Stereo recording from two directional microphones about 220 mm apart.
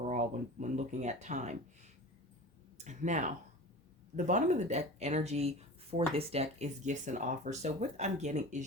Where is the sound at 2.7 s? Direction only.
35° right (ahead or behind).